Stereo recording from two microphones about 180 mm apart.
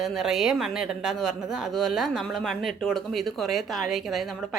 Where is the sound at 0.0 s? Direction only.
Centre (ahead or behind).